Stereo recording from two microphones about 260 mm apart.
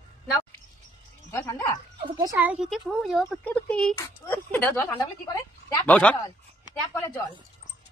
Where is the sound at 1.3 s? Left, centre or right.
Centre.